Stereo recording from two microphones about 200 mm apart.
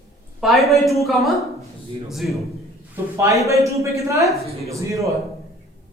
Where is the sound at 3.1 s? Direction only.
15° right (ahead or behind).